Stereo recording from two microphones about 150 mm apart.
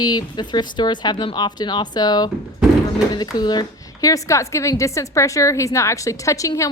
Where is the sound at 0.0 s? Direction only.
25° left (ahead or behind).